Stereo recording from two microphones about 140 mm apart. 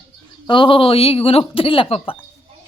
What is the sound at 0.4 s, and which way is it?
Speech, 35° left (ahead or behind).